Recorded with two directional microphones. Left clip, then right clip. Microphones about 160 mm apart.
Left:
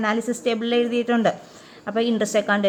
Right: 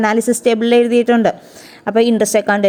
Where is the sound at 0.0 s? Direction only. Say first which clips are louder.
Right 9 dB; 45° right (ahead or behind).